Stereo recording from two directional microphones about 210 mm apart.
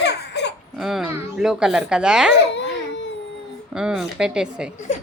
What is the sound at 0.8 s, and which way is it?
A woman's voice, centre (ahead or behind).